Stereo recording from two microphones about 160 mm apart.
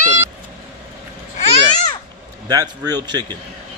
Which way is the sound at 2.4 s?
25° right (ahead or behind).